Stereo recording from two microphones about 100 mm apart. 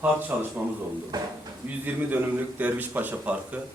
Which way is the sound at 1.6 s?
15° right (ahead or behind).